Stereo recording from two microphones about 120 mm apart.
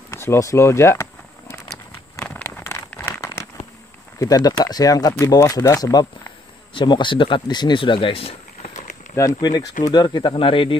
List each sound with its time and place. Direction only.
0.1 s speech: 20° left (ahead or behind)
2.1 s a sound: 15° left (ahead or behind)
4.2 s speech: 30° left (ahead or behind)
6.7 s speech: 40° left (ahead or behind)
8.6 s a sound: 90° left
9.1 s speech: 30° left (ahead or behind); by 10.8 s 45° left (ahead or behind)